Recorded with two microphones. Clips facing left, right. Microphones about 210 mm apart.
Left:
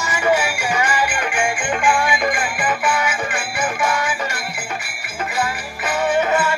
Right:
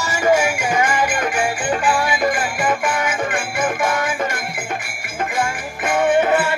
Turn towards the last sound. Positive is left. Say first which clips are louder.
# right 2 dB
turn(degrees=-55)  # may be behind; listen again after turning